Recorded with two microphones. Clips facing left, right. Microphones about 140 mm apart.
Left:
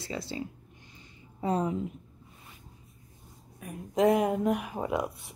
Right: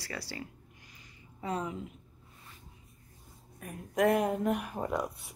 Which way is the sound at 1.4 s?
35° left (ahead or behind).